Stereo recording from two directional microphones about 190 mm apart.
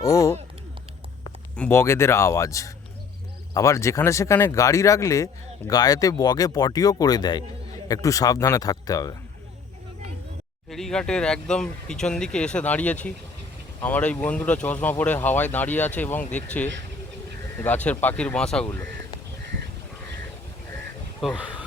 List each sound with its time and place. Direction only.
0.0 s speech: 15° left (ahead or behind)
1.5 s speech: 10° left (ahead or behind)
10.7 s speech: centre (ahead or behind)
21.2 s speech: 5° right (ahead or behind)